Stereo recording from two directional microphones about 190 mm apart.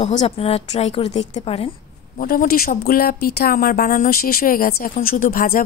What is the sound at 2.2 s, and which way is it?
A woman's voice, 50° left (ahead or behind).